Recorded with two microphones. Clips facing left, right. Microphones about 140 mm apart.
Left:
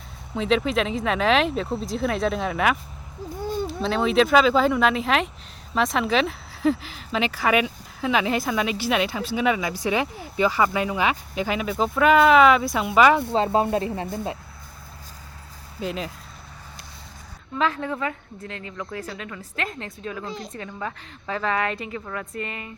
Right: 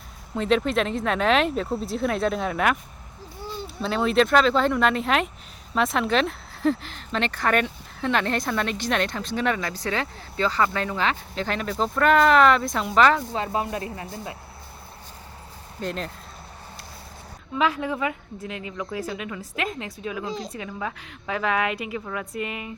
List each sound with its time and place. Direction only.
0.3 s speech: centre (ahead or behind)
3.4 s a sound: 50° left (ahead or behind)
3.7 s speech: centre (ahead or behind)
13.3 s speech: 30° left (ahead or behind)
15.8 s speech: 5° left (ahead or behind)
17.6 s a woman's voice: 10° right (ahead or behind)